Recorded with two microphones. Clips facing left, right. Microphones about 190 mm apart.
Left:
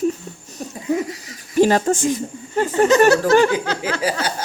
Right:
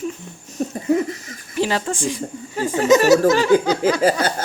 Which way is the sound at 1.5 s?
45° left (ahead or behind).